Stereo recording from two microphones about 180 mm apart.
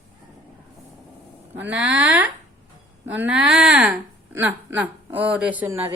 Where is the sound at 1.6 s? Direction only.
5° right (ahead or behind).